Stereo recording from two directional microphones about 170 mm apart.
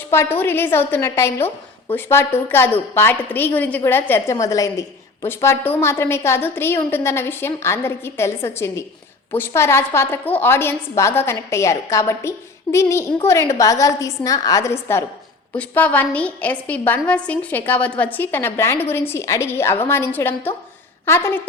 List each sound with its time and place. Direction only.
0.1 s a woman's voice: 15° left (ahead or behind)